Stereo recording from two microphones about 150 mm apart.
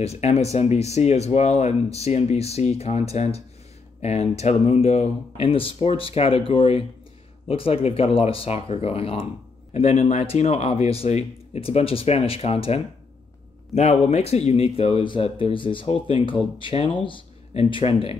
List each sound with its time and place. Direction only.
0.0 s speech: 45° left (ahead or behind)